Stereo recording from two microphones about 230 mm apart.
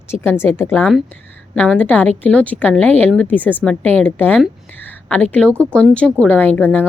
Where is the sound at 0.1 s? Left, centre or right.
Centre.